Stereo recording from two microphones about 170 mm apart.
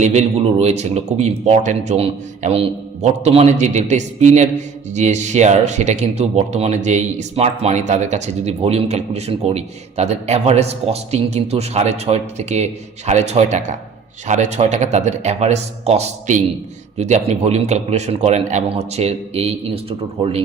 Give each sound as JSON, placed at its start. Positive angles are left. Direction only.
{"t": 0.0, "sound": "speech", "side_deg": -40}